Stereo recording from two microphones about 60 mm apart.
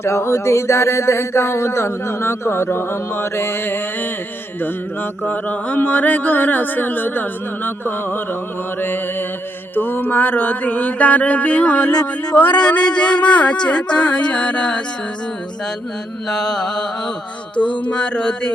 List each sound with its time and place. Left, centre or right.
0.0 s speech: left
5.2 s speech: left
9.7 s mantra: left; by 14.8 s centre
16.3 s a sound: centre